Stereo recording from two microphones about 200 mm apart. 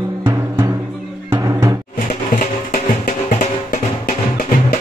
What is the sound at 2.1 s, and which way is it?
Music, 45° left (ahead or behind).